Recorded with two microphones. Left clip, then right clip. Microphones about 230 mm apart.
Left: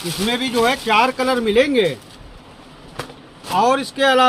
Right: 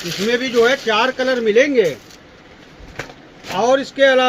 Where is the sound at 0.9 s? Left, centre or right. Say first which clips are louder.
Even; left.